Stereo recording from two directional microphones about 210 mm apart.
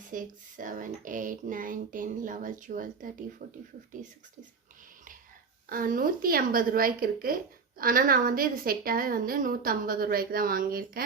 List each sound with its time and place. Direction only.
0.1 s speech: 40° right (ahead or behind)
5.6 s a woman's voice: 40° right (ahead or behind)